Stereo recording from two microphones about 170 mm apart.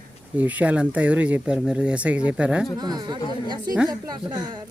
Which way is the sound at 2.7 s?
25° right (ahead or behind).